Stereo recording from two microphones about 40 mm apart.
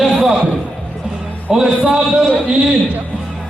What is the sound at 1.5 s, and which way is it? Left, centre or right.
Speech, centre.